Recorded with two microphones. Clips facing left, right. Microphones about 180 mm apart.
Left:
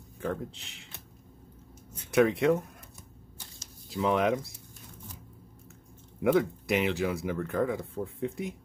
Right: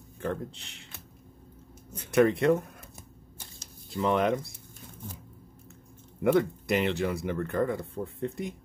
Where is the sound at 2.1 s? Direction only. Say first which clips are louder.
Right 1 dB; centre (ahead or behind).